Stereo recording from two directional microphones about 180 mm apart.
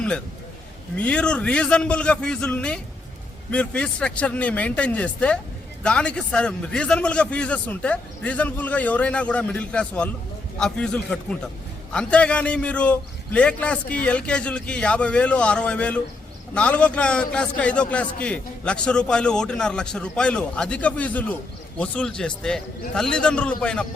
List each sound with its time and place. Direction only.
0.9 s a man's voice: 5° left (ahead or behind)